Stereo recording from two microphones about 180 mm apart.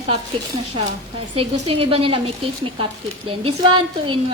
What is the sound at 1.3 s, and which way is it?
A woman's voice, 30° right (ahead or behind).